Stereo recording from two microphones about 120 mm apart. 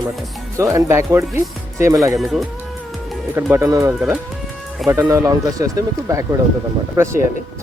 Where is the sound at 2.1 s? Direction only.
Centre (ahead or behind).